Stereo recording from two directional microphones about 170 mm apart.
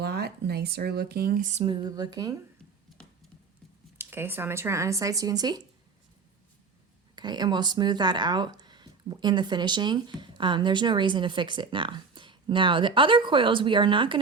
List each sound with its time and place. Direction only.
0.0 s speech: 75° right (ahead or behind); by 1.6 s 45° right (ahead or behind)
1.6 s speech: 25° right (ahead or behind)
3.9 s speech: 15° right (ahead or behind)
7.2 s speech: 25° right (ahead or behind)